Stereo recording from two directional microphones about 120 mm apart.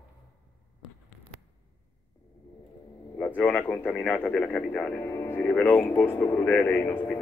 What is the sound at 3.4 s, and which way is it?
Speech, 15° left (ahead or behind).